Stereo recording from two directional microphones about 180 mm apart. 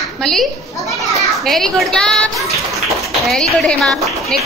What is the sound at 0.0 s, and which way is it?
Children playing, centre (ahead or behind).